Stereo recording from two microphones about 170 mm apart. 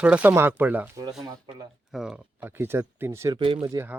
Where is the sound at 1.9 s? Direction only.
5° right (ahead or behind).